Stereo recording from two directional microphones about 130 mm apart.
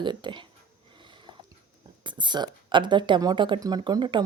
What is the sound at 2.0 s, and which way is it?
Speech, 35° right (ahead or behind).